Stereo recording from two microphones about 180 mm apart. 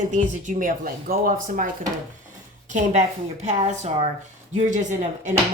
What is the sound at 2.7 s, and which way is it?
Speech, 40° right (ahead or behind).